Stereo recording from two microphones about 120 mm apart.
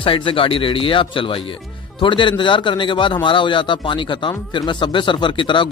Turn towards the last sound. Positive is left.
turn(degrees=40)  # may be behind; listen again after turning